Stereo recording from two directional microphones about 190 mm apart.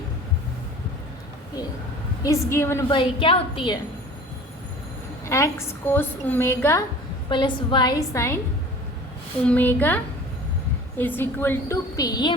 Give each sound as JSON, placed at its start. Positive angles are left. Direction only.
{"t": 2.2, "sound": "a woman's voice", "side_deg": 15}
{"t": 2.9, "sound": "a woman's voice", "side_deg": 25}
{"t": 5.2, "sound": "a woman's voice", "side_deg": 15}
{"t": 7.3, "sound": "a woman's voice", "side_deg": 25}
{"t": 9.5, "sound": "a woman's voice", "side_deg": 10}